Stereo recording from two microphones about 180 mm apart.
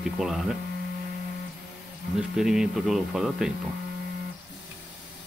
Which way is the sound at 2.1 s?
5° right (ahead or behind).